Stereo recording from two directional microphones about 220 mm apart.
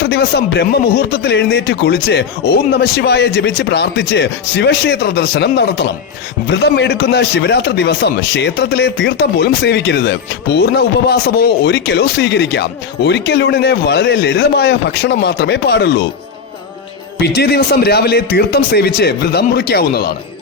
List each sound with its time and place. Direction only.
0.0 s a man's voice: 50° left (ahead or behind)
17.2 s a man's voice: 45° left (ahead or behind)